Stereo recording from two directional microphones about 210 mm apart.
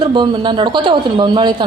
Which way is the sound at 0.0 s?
25° right (ahead or behind).